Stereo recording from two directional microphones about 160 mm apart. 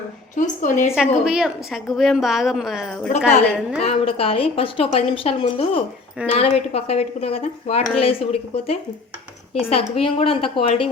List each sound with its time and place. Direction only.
0.3 s a woman's voice: 50° left (ahead or behind)
0.9 s a woman's voice: 5° right (ahead or behind)
3.8 s a woman's voice: 35° left (ahead or behind)